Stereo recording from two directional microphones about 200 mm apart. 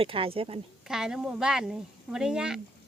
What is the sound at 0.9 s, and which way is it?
Speech, 5° right (ahead or behind).